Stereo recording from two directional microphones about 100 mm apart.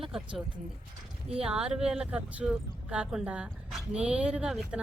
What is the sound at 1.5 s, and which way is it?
Speech, 5° right (ahead or behind).